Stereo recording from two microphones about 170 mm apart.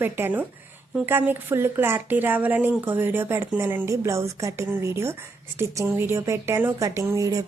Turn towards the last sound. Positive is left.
turn(degrees=-20)  # may be behind; listen again after turning